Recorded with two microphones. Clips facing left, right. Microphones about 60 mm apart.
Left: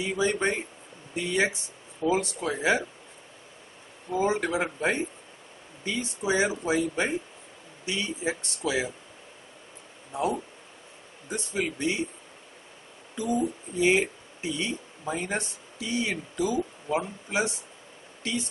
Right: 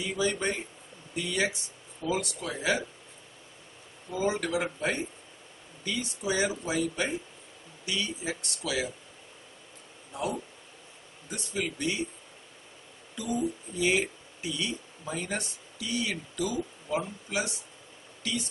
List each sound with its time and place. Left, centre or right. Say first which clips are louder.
0.0 s speech: left 3 dB; left
4.1 s speech: left 3 dB; left
10.1 s speech: left 5 dB; left
13.1 s speech: left 3 dB; left